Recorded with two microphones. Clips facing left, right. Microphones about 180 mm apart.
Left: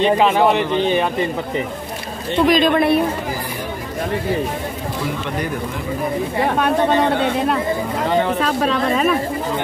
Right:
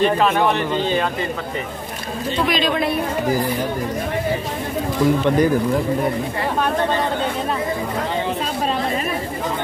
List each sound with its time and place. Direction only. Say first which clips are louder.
0.0 s speech: left 2 dB; 20° left (ahead or behind)
2.5 s a woman's voice: left 6 dB; 55° left (ahead or behind)
6.6 s speech: left 3 dB; 65° left (ahead or behind)
8.4 s a woman's voice: left 4 dB; 80° left